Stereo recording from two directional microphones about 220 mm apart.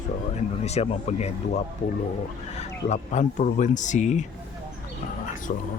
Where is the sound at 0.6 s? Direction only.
30° left (ahead or behind).